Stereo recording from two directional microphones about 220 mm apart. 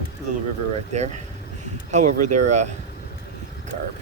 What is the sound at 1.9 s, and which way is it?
Speech, 35° right (ahead or behind).